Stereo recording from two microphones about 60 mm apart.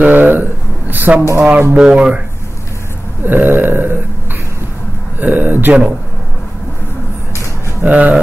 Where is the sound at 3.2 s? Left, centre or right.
Right.